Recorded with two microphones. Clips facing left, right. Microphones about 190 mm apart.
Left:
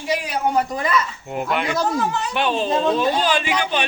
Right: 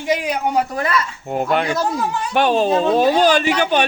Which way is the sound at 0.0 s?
15° right (ahead or behind).